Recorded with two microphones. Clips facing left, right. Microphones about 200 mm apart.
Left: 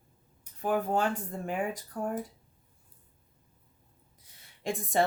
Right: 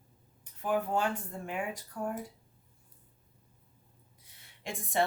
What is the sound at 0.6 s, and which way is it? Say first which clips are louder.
Speech: left 2 dB; 40° left (ahead or behind).